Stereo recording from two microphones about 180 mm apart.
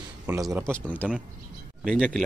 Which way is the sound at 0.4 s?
15° right (ahead or behind).